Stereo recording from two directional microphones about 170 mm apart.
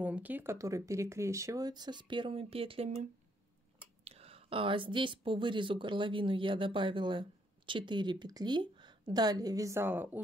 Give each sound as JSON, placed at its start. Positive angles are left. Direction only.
{"t": 0.0, "sound": "speech", "side_deg": -10}